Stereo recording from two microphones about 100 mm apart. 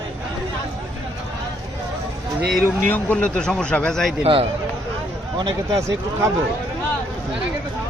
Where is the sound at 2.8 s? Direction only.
15° left (ahead or behind).